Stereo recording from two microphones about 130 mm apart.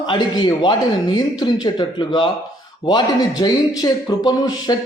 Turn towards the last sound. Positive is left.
turn(degrees=30)  # may be behind; listen again after turning